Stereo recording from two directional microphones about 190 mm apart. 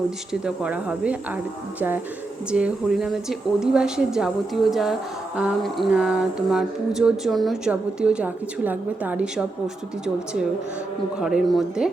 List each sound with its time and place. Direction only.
0.4 s mantra: 5° right (ahead or behind)
2.5 s mantra: 5° right (ahead or behind)
11.2 s mantra: centre (ahead or behind)